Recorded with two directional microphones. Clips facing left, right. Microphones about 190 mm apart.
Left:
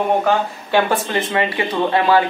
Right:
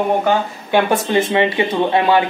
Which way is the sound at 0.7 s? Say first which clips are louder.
Right 2 dB; 20° right (ahead or behind).